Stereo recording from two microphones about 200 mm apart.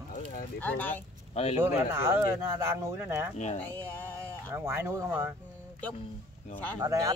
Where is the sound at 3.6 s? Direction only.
10° left (ahead or behind).